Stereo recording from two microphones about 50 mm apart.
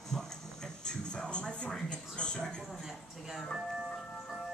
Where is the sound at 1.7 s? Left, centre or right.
Centre.